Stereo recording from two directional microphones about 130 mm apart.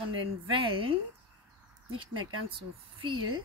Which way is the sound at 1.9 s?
40° right (ahead or behind).